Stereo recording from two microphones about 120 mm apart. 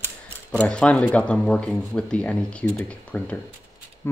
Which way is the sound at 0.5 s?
10° left (ahead or behind).